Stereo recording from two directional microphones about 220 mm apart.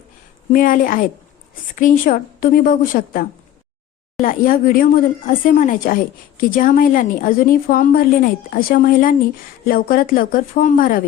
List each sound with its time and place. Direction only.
0.5 s speech: 40° left (ahead or behind)